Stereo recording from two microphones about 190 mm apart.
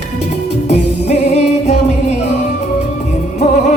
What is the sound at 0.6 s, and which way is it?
Music, 35° left (ahead or behind).